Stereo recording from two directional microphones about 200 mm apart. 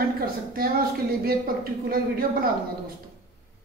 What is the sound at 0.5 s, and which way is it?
A woman's voice, 50° right (ahead or behind).